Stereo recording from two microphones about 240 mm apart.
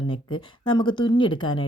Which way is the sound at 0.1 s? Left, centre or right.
Centre.